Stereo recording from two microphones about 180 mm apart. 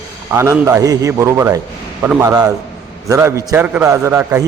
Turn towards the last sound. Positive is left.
turn(degrees=-15)  # may be behind; listen again after turning